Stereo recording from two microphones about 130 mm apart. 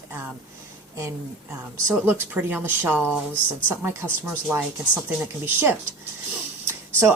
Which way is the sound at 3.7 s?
20° right (ahead or behind).